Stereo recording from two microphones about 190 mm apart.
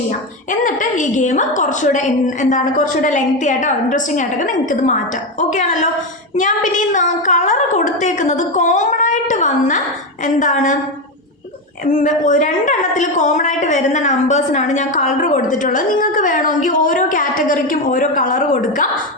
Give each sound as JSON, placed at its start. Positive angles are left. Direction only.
{"t": 0.6, "sound": "a woman's voice", "side_deg": 40}
{"t": 11.9, "sound": "a woman's voice", "side_deg": 40}